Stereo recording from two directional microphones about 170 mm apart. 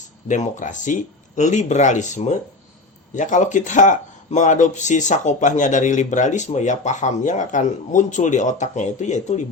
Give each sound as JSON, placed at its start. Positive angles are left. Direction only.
{"t": 0.3, "sound": "speech", "side_deg": 45}